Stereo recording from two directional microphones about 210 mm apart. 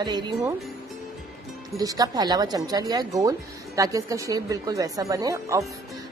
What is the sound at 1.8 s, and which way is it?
Speech, 15° right (ahead or behind).